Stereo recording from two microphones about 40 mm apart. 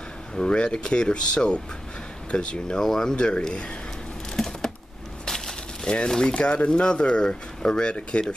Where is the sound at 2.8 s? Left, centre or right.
Centre.